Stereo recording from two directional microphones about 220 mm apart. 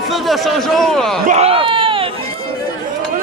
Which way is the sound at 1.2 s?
30° right (ahead or behind).